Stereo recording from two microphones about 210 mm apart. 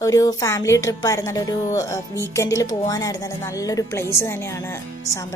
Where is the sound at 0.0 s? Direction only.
15° left (ahead or behind).